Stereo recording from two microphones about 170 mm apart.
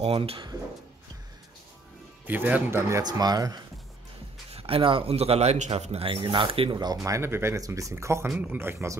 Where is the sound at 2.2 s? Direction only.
10° right (ahead or behind).